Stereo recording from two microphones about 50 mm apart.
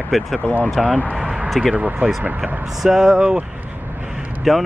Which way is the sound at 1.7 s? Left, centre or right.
Right.